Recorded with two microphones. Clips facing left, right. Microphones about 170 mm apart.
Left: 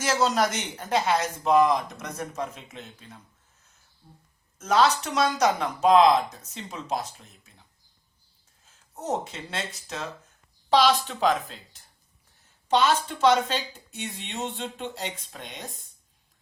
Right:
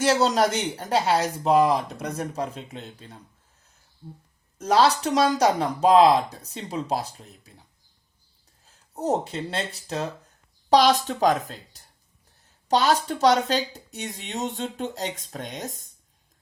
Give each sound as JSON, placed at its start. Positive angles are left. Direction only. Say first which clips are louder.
{"t": 0.0, "sound": "speech", "louder": "right 3 dB", "side_deg": -35}
{"t": 4.5, "sound": "speech", "louder": "right 2 dB", "side_deg": -35}
{"t": 8.6, "sound": "speech", "louder": "right 6 dB", "side_deg": -35}